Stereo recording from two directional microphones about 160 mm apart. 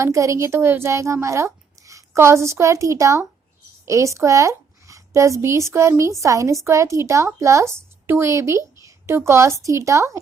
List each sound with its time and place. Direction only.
0.0 s a child's voice: 20° right (ahead or behind)